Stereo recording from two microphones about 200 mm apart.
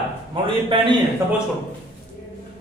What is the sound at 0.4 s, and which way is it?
Speech, 25° right (ahead or behind).